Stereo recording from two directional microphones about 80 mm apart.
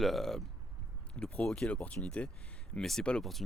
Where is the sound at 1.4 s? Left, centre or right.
Centre.